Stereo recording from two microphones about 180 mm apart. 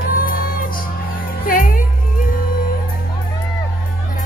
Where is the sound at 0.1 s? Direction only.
50° left (ahead or behind).